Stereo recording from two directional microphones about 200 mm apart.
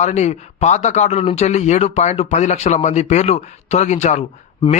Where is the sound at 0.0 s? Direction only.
35° left (ahead or behind).